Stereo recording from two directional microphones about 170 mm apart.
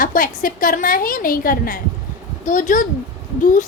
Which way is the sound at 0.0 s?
55° left (ahead or behind).